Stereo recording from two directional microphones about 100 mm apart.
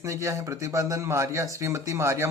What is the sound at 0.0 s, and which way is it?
A man's voice, 30° right (ahead or behind).